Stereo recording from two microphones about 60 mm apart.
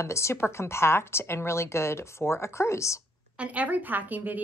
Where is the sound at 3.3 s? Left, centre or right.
Right.